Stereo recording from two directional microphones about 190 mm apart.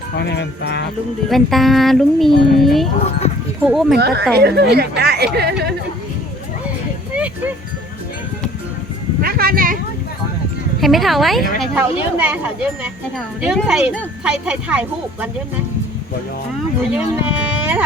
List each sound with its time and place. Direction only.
0.2 s speech: 60° left (ahead or behind)
1.3 s speech: centre (ahead or behind)
3.9 s speech: 60° right (ahead or behind)
9.2 s speech: 50° right (ahead or behind)
10.8 s speech: centre (ahead or behind)
16.9 s speech: 5° right (ahead or behind)